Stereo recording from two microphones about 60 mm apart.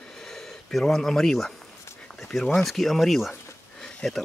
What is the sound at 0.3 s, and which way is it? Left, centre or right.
Speech, centre.